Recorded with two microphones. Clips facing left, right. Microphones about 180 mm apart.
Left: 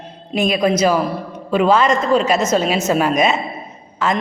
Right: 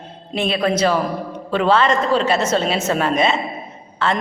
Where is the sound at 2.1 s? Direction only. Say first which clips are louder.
Left 2 dB; 30° right (ahead or behind).